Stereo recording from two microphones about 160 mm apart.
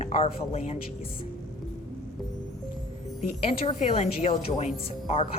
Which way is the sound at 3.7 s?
40° left (ahead or behind).